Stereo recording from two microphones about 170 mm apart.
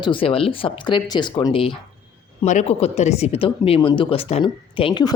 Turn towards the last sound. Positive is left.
turn(degrees=25)  # may be behind; listen again after turning